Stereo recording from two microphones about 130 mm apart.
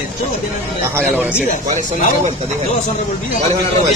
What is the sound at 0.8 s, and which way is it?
Speech, 15° right (ahead or behind).